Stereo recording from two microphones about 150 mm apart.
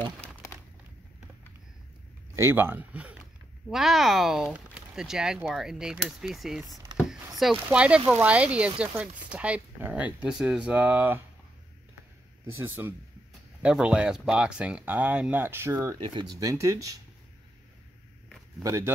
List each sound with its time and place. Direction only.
2.3 s speech: 15° right (ahead or behind)
12.4 s speech: 15° right (ahead or behind)
16.0 s speech: 30° right (ahead or behind)
18.6 s speech: 20° right (ahead or behind)